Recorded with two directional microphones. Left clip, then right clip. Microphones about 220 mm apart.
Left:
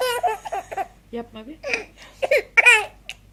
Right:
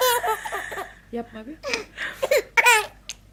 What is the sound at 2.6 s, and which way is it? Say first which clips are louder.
Baby laughter: left 3 dB; 10° right (ahead or behind).